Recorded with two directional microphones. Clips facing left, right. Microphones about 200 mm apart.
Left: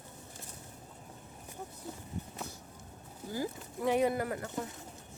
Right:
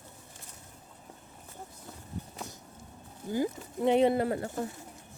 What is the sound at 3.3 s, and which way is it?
Speech, 20° right (ahead or behind).